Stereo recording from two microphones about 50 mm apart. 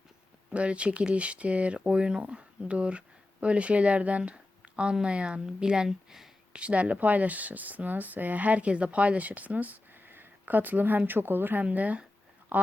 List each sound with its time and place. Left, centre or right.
0.5 s speech: right; by 6.3 s centre
6.5 s speech: right
11.6 s speech: right